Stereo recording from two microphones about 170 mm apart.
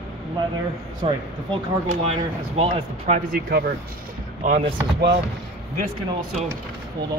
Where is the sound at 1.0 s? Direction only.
30° right (ahead or behind).